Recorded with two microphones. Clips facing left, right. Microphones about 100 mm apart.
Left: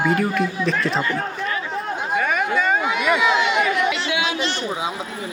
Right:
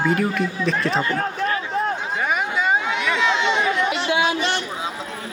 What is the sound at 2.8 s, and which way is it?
Run, 10° left (ahead or behind).